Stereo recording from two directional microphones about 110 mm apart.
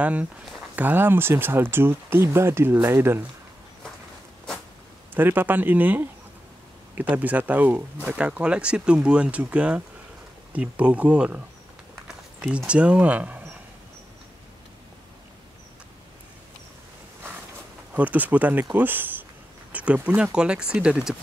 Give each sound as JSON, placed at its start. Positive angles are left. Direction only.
{"t": 0.0, "sound": "speech", "side_deg": -15}
{"t": 5.1, "sound": "speech", "side_deg": -20}
{"t": 17.9, "sound": "speech", "side_deg": -15}